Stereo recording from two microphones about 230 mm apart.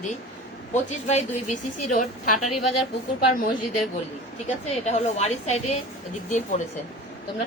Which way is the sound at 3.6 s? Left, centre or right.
Left.